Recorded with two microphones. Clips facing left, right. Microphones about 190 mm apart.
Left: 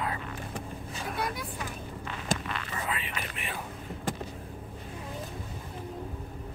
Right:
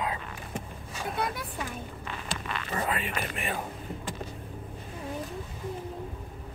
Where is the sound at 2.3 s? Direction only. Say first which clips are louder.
Left 8 dB; 45° left (ahead or behind).